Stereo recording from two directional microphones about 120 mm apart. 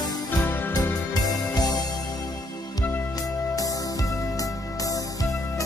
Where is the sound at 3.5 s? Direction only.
30° left (ahead or behind).